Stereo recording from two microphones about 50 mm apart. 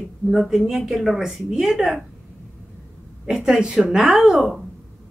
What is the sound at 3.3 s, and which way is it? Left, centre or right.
Speech, centre.